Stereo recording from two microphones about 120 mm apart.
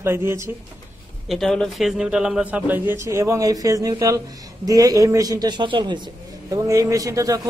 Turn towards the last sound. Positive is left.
turn(degrees=-30)  # may be behind; listen again after turning